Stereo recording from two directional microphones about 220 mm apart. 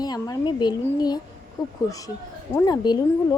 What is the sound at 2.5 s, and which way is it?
Speech, 20° left (ahead or behind).